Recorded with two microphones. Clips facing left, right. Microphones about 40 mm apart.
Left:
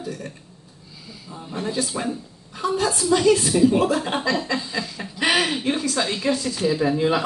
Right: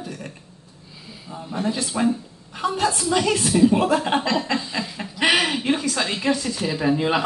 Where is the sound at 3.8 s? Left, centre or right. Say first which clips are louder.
Right 1 dB; right.